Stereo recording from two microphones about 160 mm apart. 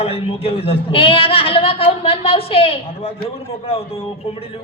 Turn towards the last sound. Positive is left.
turn(degrees=35)  # may be behind; listen again after turning